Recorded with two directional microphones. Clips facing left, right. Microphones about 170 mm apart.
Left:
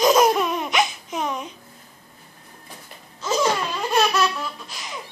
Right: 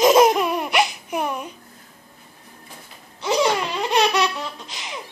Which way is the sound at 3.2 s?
15° right (ahead or behind).